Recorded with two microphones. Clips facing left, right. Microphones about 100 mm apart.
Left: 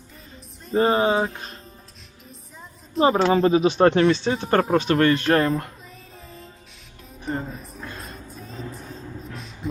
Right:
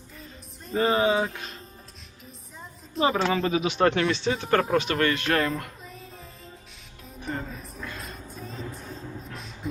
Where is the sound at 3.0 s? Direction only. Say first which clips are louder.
Left 6 dB; 35° left (ahead or behind).